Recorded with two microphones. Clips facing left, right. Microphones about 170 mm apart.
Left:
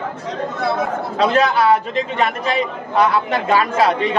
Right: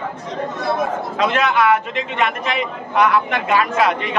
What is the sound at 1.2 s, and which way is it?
A man's voice, 35° left (ahead or behind).